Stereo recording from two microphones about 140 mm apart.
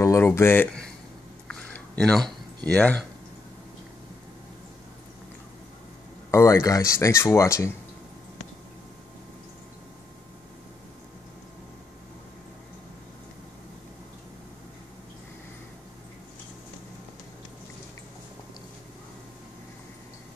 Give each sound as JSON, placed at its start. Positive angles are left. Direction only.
{"t": 0.0, "sound": "speech", "side_deg": 20}
{"t": 1.5, "sound": "a sound", "side_deg": 5}
{"t": 6.3, "sound": "speech", "side_deg": 20}